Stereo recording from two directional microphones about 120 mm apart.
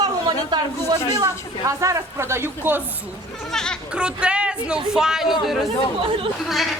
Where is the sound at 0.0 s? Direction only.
35° right (ahead or behind); by 2.8 s 20° right (ahead or behind).